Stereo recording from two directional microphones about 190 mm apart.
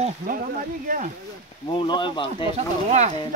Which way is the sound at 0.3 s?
45° right (ahead or behind).